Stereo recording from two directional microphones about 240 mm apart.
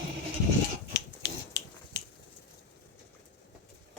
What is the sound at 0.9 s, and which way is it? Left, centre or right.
Finger snapping, left.